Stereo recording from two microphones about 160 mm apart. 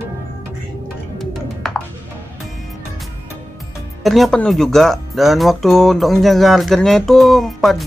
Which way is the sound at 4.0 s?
Centre (ahead or behind).